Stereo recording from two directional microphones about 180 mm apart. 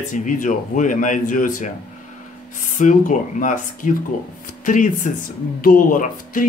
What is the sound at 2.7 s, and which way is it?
Speech, 45° left (ahead or behind).